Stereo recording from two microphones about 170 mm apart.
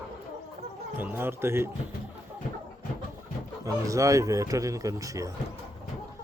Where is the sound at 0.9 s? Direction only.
10° right (ahead or behind).